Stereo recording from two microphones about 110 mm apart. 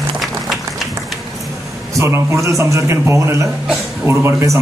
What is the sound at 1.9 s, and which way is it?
Speech, 25° right (ahead or behind).